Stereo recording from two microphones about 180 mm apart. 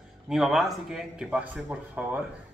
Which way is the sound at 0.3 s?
Centre (ahead or behind).